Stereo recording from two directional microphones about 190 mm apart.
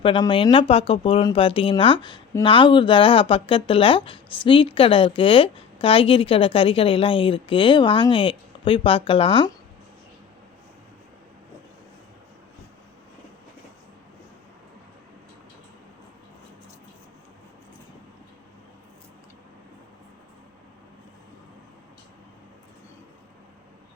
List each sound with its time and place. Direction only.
0.0 s speech: 25° left (ahead or behind)